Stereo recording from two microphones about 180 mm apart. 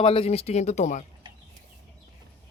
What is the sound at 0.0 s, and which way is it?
Speech, 30° left (ahead or behind).